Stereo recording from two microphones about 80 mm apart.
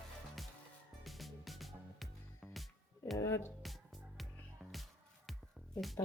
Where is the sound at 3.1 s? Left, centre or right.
Left.